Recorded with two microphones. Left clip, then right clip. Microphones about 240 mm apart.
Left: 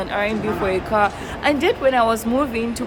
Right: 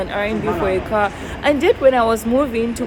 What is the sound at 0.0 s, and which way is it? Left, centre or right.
A woman's voice, centre.